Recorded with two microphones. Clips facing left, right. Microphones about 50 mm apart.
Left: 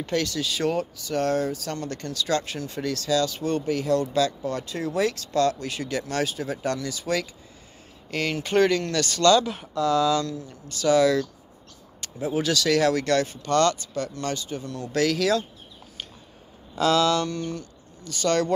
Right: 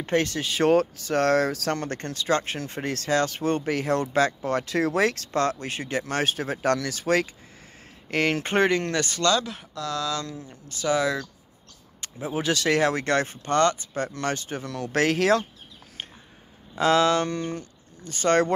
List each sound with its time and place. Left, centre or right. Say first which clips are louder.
0.0 s speech: right 2 dB; right
0.7 s speech: right 10 dB; right
4.6 s speech: right 2 dB; right
5.3 s speech: left 2 dB; right
6.3 s speech: right 3 dB; right
8.5 s speech: left 3 dB; right
9.2 s speech: left 7 dB; centre
10.2 s speech: left 4 dB; centre
12.3 s speech: left 1 dB; right
13.6 s speech: even; centre
14.1 s speech: right 1 dB; right
14.6 s speech: right 2 dB; right
14.9 s speech: right 1 dB; right
16.7 s speech: right 1 dB; right